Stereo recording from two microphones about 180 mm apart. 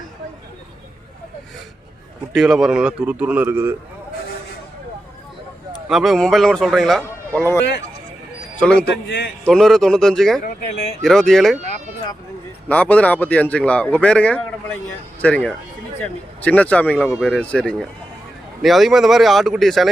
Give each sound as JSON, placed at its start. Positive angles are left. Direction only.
{"t": 2.3, "sound": "a man's voice", "side_deg": 0}
{"t": 5.9, "sound": "speech", "side_deg": 0}
{"t": 7.3, "sound": "a man's voice", "side_deg": 15}
{"t": 9.0, "sound": "a man's voice", "side_deg": 60}
{"t": 9.4, "sound": "speech", "side_deg": 5}
{"t": 10.4, "sound": "speech", "side_deg": 35}
{"t": 11.0, "sound": "speech", "side_deg": 0}
{"t": 12.6, "sound": "a man's voice", "side_deg": 5}